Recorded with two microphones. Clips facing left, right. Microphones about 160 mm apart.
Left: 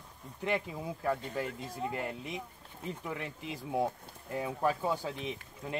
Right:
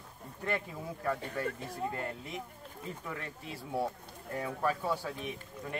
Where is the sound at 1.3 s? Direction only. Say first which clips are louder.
Even; 15° left (ahead or behind).